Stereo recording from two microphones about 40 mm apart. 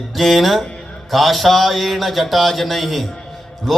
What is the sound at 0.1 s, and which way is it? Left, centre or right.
A man's voice, centre.